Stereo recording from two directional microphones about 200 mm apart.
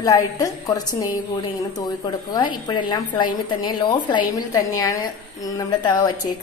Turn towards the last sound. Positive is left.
turn(degrees=20)  # may be behind; listen again after turning